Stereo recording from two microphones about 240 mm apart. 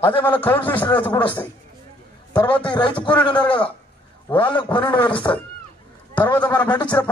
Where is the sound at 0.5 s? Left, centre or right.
Centre.